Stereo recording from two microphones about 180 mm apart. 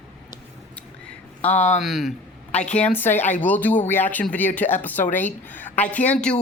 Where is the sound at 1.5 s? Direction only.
40° left (ahead or behind).